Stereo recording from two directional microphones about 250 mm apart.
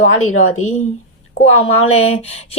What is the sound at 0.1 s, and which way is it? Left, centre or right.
Speech, left.